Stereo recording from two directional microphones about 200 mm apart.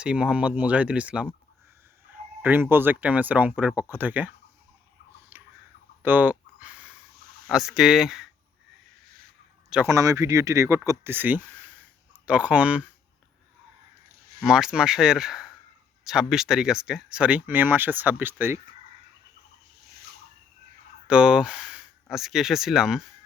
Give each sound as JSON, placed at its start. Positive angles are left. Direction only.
{"t": 0.0, "sound": "speech", "side_deg": -5}
{"t": 2.4, "sound": "speech", "side_deg": -10}
{"t": 5.3, "sound": "a sound", "side_deg": -10}
{"t": 7.4, "sound": "speech", "side_deg": 0}
{"t": 9.6, "sound": "speech", "side_deg": -10}
{"t": 14.4, "sound": "speech", "side_deg": -5}
{"t": 21.1, "sound": "speech", "side_deg": -5}